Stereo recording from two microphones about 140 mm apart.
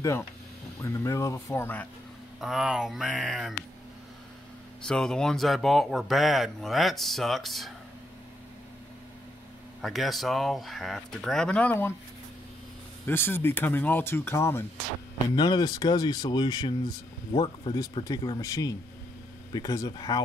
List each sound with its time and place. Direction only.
0.7 s speech: 20° left (ahead or behind)
2.4 s speech: 5° right (ahead or behind)
4.8 s speech: 5° left (ahead or behind)
9.8 s speech: centre (ahead or behind)
13.0 s speech: 15° left (ahead or behind)
15.3 s speech: 30° left (ahead or behind)